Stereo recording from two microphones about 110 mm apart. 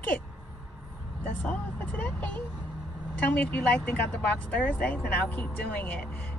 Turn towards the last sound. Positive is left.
turn(degrees=15)  # may be behind; listen again after turning